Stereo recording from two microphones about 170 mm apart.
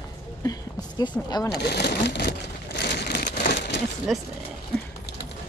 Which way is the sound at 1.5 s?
70° left (ahead or behind).